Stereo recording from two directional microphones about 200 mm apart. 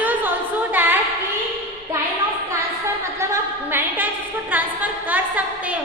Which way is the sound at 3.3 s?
10° right (ahead or behind).